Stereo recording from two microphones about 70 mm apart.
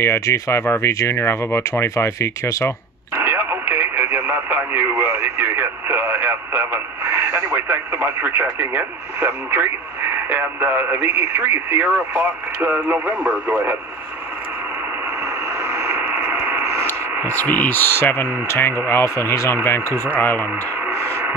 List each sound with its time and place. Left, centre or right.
0.0 s speech: left
3.2 s speech: right
15.6 s vehicle: right
16.1 s mechanisms: right
17.3 s speech: left
19.9 s speech: right
20.2 s speech: left
20.9 s radio: right